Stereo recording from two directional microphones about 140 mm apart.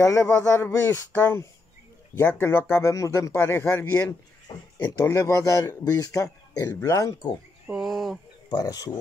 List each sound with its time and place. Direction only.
0.0 s speech: 20° left (ahead or behind)
4.7 s speech: 30° left (ahead or behind)
5.0 s a man's voice: 20° left (ahead or behind)
7.6 s a sound: centre (ahead or behind)
8.5 s a man's voice: 25° left (ahead or behind)